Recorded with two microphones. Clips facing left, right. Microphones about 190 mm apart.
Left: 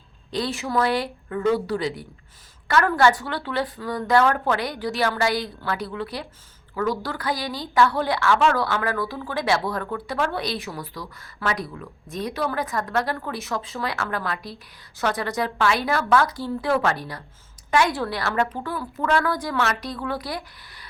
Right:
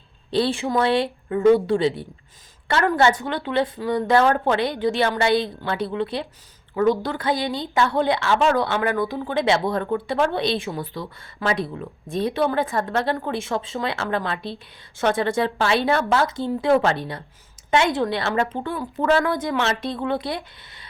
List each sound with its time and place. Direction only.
0.3 s a woman's voice: 30° right (ahead or behind)